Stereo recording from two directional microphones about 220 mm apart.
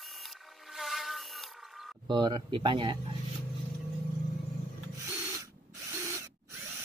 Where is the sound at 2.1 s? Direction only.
20° right (ahead or behind).